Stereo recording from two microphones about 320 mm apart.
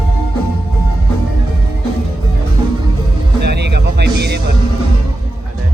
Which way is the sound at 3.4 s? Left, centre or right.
Right.